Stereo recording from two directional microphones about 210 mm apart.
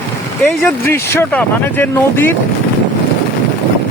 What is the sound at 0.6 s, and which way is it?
Speech, 10° left (ahead or behind).